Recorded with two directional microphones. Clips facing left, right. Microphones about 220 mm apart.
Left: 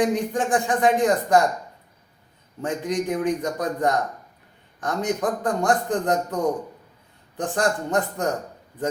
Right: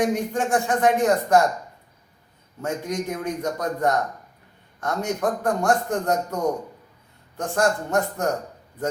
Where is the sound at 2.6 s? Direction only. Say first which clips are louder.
Left 2 dB; 15° left (ahead or behind).